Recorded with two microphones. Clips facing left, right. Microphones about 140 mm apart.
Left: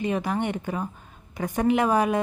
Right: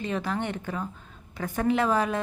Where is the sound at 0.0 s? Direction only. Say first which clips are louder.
Left 4 dB; 15° left (ahead or behind).